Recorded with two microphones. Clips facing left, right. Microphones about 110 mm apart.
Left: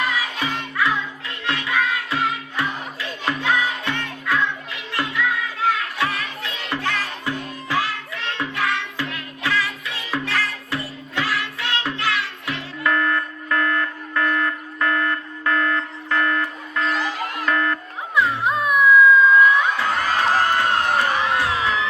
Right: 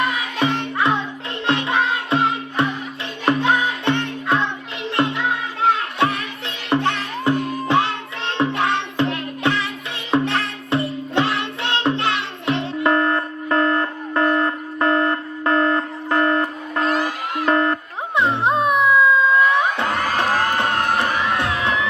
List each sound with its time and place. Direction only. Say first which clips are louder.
0.3 s music: right 4 dB; 25° right (ahead or behind)
16.8 s music: right 3 dB; 45° right (ahead or behind)
17.5 s music: right 5 dB; 25° right (ahead or behind)
19.8 s crowd: even; 60° right (ahead or behind)